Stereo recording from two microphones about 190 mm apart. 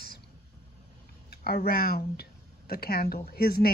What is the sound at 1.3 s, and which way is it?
Speech, 55° left (ahead or behind).